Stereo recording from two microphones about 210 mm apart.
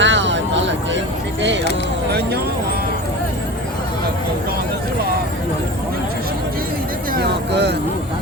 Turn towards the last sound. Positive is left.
turn(degrees=-55)  # may be behind; listen again after turning